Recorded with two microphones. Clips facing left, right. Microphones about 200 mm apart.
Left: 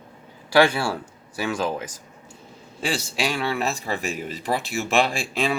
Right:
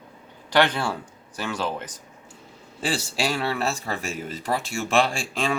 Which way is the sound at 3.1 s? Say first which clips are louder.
Even; 35° right (ahead or behind).